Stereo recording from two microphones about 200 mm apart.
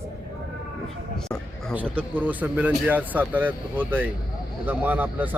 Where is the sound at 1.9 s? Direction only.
10° right (ahead or behind).